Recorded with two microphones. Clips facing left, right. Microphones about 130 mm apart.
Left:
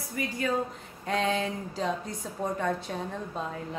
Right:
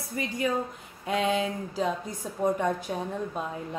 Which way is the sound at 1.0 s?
5° right (ahead or behind).